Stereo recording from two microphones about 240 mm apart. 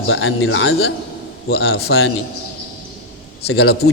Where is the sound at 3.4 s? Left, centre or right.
Left.